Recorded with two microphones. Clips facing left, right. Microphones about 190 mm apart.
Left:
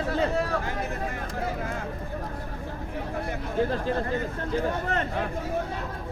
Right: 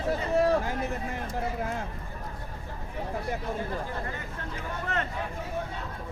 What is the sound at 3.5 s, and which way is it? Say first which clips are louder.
Speech: left 8 dB; 85° left.